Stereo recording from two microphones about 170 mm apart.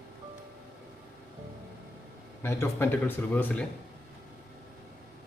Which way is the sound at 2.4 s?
15° left (ahead or behind).